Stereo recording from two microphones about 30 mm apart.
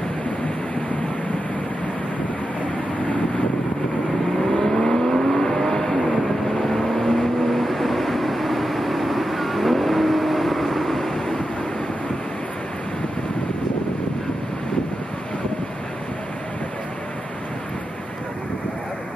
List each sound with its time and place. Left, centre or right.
4.6 s vehicle: centre